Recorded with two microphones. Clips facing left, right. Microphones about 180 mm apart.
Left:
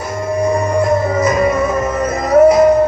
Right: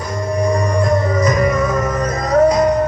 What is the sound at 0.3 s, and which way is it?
Music, 25° left (ahead or behind).